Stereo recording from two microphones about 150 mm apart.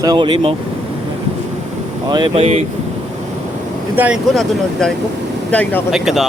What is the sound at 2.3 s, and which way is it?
Speech, 45° right (ahead or behind).